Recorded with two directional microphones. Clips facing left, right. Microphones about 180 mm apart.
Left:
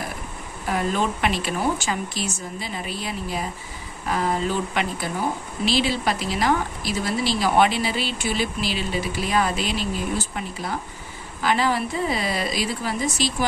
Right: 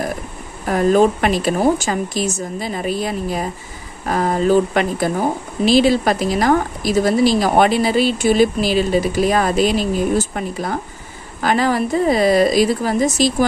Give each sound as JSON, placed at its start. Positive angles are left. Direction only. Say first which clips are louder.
{"t": 0.7, "sound": "speech", "louder": "right 10 dB", "side_deg": -45}